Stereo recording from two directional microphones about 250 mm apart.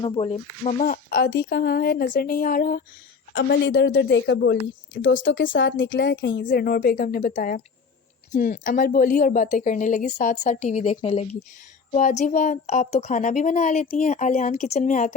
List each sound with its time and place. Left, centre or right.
0.0 s speech: left
1.1 s speech: left
3.3 s a woman's voice: left